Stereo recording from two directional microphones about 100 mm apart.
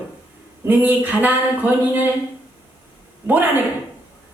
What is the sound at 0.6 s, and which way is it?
Speech, 15° right (ahead or behind).